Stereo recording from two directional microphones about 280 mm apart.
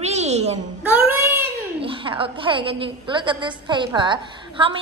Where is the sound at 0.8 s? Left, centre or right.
Centre.